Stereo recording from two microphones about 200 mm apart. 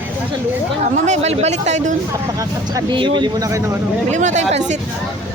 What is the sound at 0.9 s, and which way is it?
Speech, 35° right (ahead or behind).